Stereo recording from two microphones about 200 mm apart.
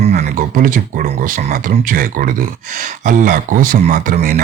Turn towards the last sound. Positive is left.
turn(degrees=-45)  # may be behind; listen again after turning